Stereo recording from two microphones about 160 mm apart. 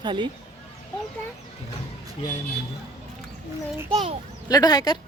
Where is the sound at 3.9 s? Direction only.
35° right (ahead or behind).